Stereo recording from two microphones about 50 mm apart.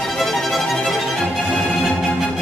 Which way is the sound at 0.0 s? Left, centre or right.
Centre.